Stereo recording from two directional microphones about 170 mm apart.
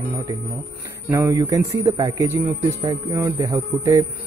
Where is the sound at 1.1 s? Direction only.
20° right (ahead or behind).